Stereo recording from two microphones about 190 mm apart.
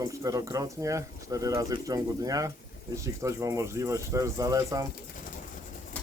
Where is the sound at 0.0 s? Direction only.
15° right (ahead or behind).